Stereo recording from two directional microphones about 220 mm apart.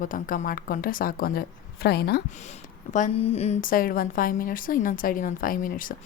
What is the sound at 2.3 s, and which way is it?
A woman's voice, 30° left (ahead or behind).